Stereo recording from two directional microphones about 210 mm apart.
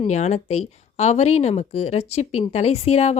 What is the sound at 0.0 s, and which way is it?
Speech, 30° left (ahead or behind).